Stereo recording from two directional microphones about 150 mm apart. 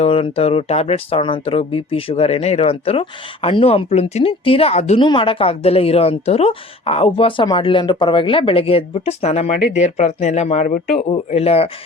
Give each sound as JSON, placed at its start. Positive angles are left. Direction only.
{"t": 0.0, "sound": "a woman's voice", "side_deg": 40}
{"t": 4.9, "sound": "a woman's voice", "side_deg": 35}
{"t": 10.7, "sound": "a man's voice", "side_deg": 80}
{"t": 11.1, "sound": "a woman's voice", "side_deg": 45}